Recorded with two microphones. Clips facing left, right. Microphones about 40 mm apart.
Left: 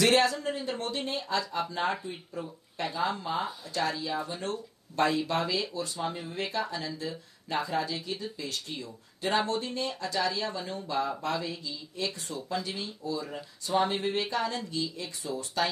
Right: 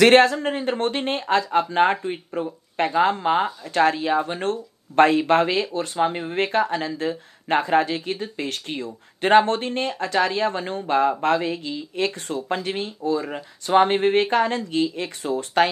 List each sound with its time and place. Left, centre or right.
0.0 s speech: right